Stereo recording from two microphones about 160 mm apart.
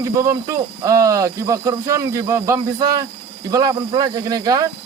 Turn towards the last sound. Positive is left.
turn(degrees=-25)  # may be behind; listen again after turning